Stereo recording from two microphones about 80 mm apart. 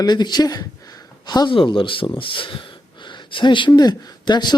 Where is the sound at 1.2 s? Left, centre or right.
Left.